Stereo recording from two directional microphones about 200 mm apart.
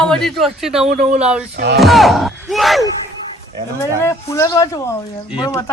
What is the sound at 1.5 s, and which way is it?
Speech, 60° right (ahead or behind).